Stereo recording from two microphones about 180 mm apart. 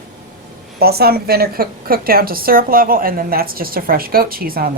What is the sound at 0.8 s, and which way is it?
A woman's voice, 60° right (ahead or behind).